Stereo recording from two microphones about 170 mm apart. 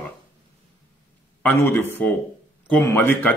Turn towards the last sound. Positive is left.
turn(degrees=15)  # may be behind; listen again after turning